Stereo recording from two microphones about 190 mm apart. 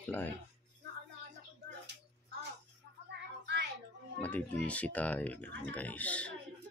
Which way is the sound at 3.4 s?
65° right (ahead or behind).